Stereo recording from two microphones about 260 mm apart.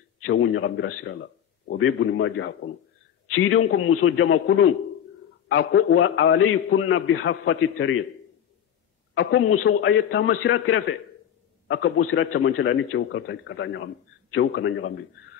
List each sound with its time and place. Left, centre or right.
0.2 s a man's voice: left
9.1 s a man's voice: left